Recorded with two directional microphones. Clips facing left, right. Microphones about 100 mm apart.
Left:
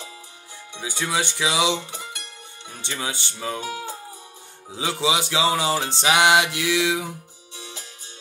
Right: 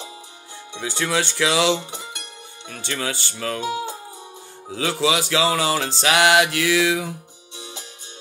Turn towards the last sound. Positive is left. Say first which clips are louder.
# right 2 dB
turn(degrees=-20)  # may be behind; listen again after turning